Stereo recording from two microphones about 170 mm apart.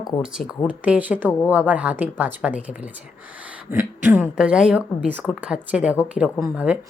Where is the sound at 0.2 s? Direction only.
5° right (ahead or behind).